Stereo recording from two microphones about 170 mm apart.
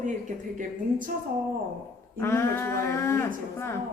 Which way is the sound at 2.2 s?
15° left (ahead or behind).